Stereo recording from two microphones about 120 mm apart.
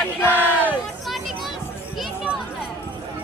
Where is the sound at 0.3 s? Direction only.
15° right (ahead or behind).